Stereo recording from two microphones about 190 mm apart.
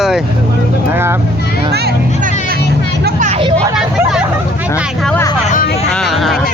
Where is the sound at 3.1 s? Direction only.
40° right (ahead or behind).